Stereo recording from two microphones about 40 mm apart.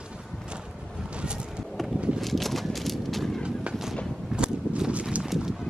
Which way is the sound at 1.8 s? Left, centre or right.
Centre.